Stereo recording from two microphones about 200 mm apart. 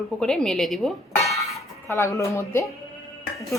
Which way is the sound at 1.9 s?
15° left (ahead or behind).